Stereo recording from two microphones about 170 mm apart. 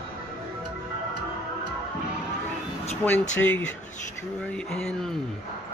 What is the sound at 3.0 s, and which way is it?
Speech, 10° left (ahead or behind).